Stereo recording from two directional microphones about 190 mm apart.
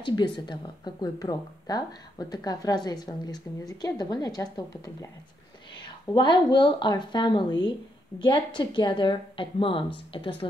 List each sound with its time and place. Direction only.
0.0 s speech: 25° left (ahead or behind)